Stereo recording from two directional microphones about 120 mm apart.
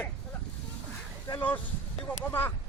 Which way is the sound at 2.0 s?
15° left (ahead or behind).